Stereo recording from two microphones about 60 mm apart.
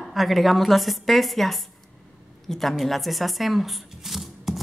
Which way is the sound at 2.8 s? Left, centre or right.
Centre.